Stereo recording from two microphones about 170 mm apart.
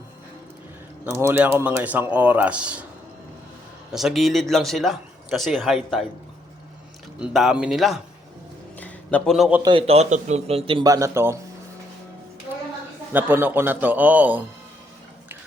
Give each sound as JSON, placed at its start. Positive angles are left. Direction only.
{"t": 1.1, "sound": "a man's voice", "side_deg": -15}
{"t": 3.9, "sound": "speech", "side_deg": 0}
{"t": 7.2, "sound": "speech", "side_deg": -5}
{"t": 8.8, "sound": "a sound", "side_deg": 5}
{"t": 9.6, "sound": "a man's voice", "side_deg": -35}
{"t": 13.1, "sound": "a man's voice", "side_deg": -10}